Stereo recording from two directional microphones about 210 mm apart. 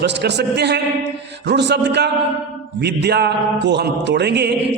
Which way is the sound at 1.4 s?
55° right (ahead or behind).